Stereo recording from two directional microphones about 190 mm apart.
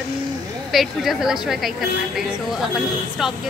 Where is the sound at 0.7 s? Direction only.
Centre (ahead or behind).